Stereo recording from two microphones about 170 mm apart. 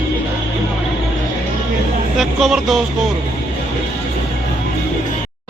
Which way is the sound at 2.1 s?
Centre (ahead or behind).